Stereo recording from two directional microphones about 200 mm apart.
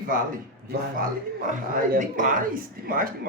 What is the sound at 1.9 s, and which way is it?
Speech, 40° right (ahead or behind).